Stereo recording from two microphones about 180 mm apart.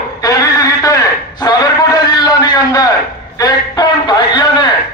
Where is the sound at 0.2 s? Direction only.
20° left (ahead or behind).